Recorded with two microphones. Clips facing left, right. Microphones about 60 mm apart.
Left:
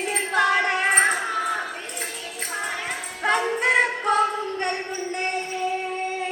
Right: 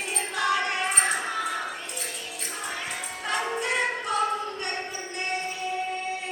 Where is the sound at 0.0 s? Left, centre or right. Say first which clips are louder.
Left 6 dB; left.